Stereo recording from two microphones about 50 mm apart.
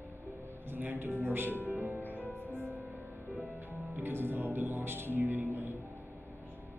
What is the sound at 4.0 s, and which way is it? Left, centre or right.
A man's voice, right.